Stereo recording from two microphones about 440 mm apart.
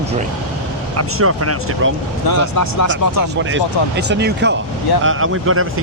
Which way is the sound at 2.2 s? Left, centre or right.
Left.